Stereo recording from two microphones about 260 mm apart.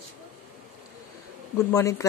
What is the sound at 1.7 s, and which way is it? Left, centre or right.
Speech, centre.